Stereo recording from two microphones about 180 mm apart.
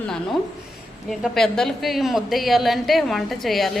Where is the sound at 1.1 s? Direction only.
Centre (ahead or behind).